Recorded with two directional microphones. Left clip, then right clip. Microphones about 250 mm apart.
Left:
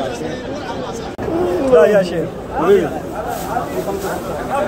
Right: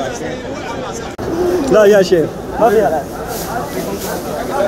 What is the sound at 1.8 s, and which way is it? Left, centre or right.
Speech, right.